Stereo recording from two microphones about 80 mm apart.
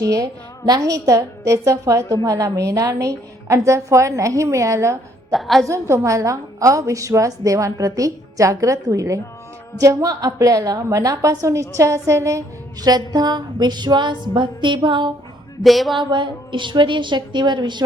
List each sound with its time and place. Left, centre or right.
0.1 s a woman's voice: right
5.3 s a woman's voice: centre
5.6 s a woman's voice: right
12.8 s music: right
15.6 s speech: centre
16.0 s a woman's voice: right